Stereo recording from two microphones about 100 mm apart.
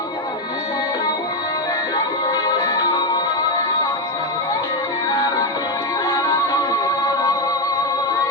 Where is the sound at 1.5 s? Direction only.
40° left (ahead or behind).